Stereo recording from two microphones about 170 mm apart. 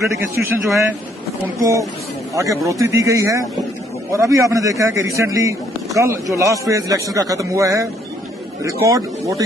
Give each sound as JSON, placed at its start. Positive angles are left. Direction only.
{"t": 0.0, "sound": "speech", "side_deg": -15}
{"t": 8.8, "sound": "speech", "side_deg": -20}